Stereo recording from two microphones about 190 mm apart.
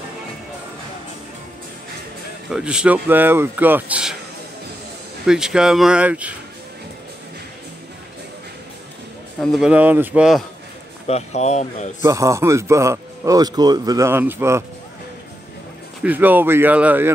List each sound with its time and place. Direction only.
2.5 s a man's voice: 5° right (ahead or behind)
5.2 s speech: 5° right (ahead or behind)
9.4 s speech: centre (ahead or behind)
11.1 s speech: 35° left (ahead or behind)
12.0 s a man's voice: 15° right (ahead or behind)
16.0 s a man's voice: 10° right (ahead or behind)